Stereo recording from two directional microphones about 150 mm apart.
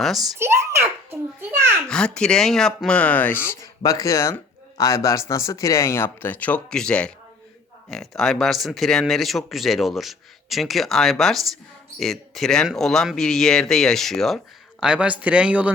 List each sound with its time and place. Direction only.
0.0 s speech: centre (ahead or behind)
0.3 s a sound: 15° right (ahead or behind)
1.9 s speech: 5° left (ahead or behind)